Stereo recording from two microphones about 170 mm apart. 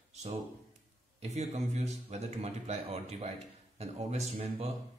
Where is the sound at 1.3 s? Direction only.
40° right (ahead or behind).